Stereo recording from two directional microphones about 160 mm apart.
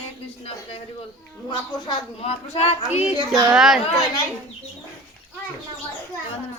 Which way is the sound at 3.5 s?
Centre (ahead or behind).